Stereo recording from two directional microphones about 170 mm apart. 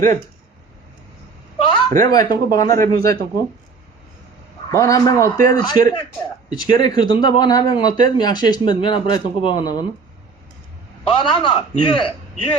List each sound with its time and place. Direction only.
2.0 s speech: 20° left (ahead or behind)
4.7 s speech: 20° left (ahead or behind)
11.0 s a man's voice: 30° left (ahead or behind)